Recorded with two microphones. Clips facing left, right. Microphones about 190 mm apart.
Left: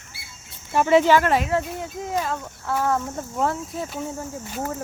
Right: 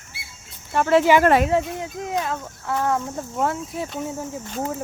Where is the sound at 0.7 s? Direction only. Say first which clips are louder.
Even; centre (ahead or behind).